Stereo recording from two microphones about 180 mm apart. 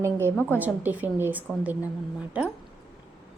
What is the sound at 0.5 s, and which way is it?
A woman's voice, 10° right (ahead or behind).